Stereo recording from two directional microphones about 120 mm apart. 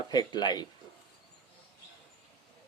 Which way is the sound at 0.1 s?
35° left (ahead or behind).